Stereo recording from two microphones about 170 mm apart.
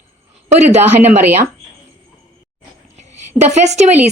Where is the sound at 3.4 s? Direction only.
40° right (ahead or behind).